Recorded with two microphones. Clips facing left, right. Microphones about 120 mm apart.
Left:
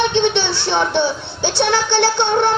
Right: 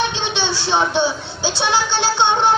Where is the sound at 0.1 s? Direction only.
60° left (ahead or behind).